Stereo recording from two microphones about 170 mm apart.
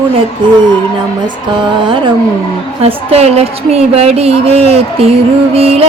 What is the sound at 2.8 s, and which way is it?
A woman's voice, 35° right (ahead or behind).